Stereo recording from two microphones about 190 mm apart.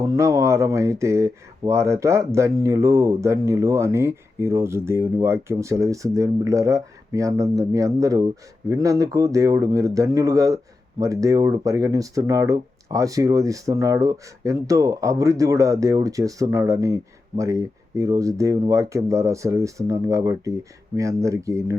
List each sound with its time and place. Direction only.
0.0 s speech: 15° right (ahead or behind)